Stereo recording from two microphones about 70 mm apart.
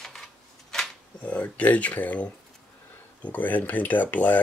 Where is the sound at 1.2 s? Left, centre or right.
Centre.